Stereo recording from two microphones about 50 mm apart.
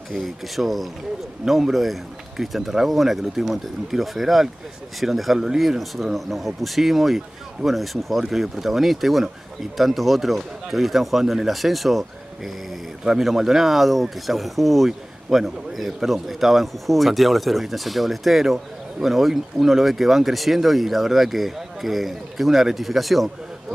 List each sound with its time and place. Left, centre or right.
0.1 s a man's voice: centre